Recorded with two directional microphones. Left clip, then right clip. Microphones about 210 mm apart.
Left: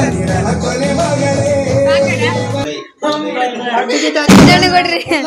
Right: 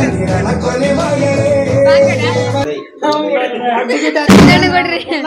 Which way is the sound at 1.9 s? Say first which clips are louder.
Right 3 dB; 30° right (ahead or behind).